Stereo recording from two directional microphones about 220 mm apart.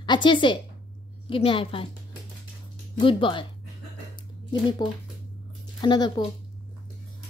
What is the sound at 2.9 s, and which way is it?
Speech, 20° left (ahead or behind).